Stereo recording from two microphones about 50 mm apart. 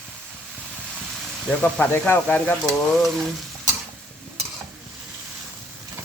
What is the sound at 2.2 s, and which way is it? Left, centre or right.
Speech, left.